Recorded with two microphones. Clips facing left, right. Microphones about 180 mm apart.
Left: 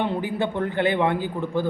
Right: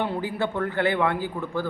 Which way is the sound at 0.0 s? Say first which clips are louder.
Left 2 dB; 20° left (ahead or behind).